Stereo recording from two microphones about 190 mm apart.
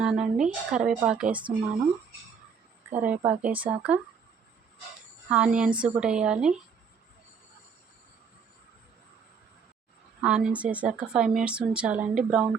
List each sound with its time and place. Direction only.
0.0 s speech: 5° right (ahead or behind)
2.9 s a woman's voice: 10° right (ahead or behind)
5.3 s speech: 5° right (ahead or behind)
10.2 s speech: 5° right (ahead or behind)